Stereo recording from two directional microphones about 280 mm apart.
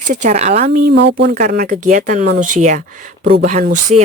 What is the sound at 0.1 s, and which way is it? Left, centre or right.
Speech, right.